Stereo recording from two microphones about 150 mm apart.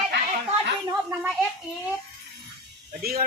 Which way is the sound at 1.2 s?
Centre (ahead or behind).